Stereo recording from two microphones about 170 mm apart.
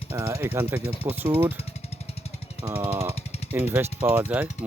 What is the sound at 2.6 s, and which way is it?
Speech, 10° right (ahead or behind).